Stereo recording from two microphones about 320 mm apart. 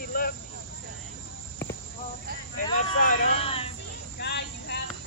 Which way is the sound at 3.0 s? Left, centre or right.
Left.